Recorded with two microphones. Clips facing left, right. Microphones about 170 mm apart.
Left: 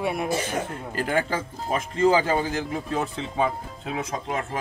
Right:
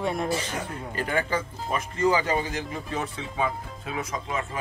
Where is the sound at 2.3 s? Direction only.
50° left (ahead or behind).